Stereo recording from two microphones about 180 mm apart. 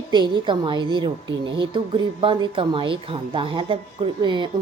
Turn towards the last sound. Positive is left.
turn(degrees=-25)  # may be behind; listen again after turning